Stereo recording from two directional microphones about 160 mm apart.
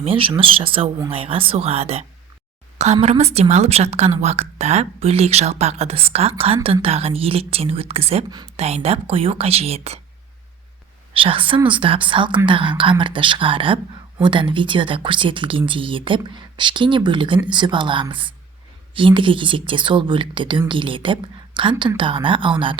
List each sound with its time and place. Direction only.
0.0 s speech: 35° right (ahead or behind)
11.1 s speech: 35° right (ahead or behind)